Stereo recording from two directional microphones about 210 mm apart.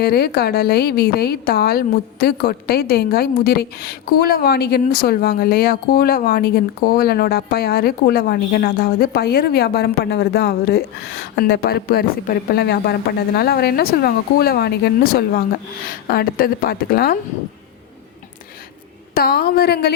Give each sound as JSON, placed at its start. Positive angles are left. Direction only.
{"t": 0.0, "sound": "a woman's voice", "side_deg": 50}
{"t": 19.1, "sound": "a woman's voice", "side_deg": 45}